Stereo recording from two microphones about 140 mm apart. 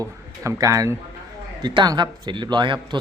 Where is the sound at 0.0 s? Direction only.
20° right (ahead or behind).